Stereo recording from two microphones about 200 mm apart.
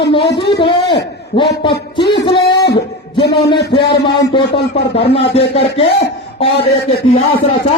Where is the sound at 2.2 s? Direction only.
25° left (ahead or behind).